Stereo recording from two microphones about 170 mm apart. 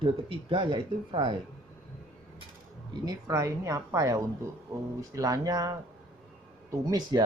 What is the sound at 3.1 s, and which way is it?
Speech, 20° right (ahead or behind).